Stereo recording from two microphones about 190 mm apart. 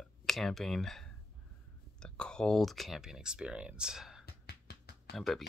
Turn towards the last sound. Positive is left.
turn(degrees=0)  # may be behind; listen again after turning